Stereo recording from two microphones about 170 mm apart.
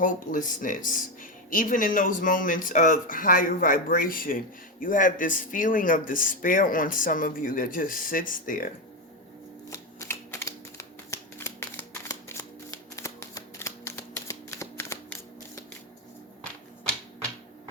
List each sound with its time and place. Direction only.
0.0 s speech: 50° left (ahead or behind)
9.6 s typewriter: 20° left (ahead or behind)